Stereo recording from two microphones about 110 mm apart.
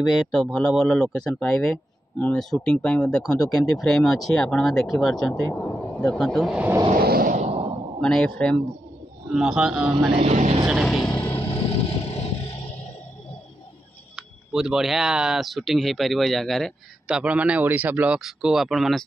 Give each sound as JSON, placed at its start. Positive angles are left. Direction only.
{"t": 0.3, "sound": "speech", "side_deg": 0}
{"t": 3.3, "sound": "speech", "side_deg": 35}
{"t": 3.5, "sound": "speech", "side_deg": 5}
{"t": 6.9, "sound": "a sound", "side_deg": -90}
{"t": 8.0, "sound": "speech", "side_deg": 5}
{"t": 9.3, "sound": "speech", "side_deg": -5}
{"t": 10.1, "sound": "speech", "side_deg": -75}
{"t": 10.7, "sound": "speech", "side_deg": 0}
{"t": 11.3, "sound": "music", "side_deg": 60}
{"t": 14.1, "sound": "speech", "side_deg": -5}
{"t": 17.2, "sound": "speech", "side_deg": -10}